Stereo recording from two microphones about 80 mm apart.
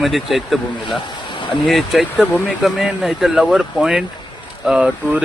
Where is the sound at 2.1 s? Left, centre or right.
Centre.